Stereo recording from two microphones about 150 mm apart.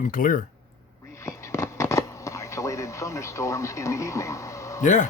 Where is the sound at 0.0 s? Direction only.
65° left (ahead or behind).